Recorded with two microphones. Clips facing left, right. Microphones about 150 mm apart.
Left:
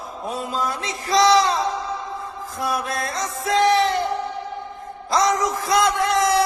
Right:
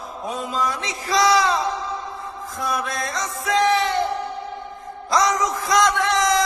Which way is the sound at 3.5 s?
30° left (ahead or behind).